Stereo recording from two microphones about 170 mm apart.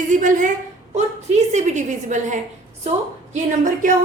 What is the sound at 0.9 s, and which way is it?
A woman's voice, 40° right (ahead or behind).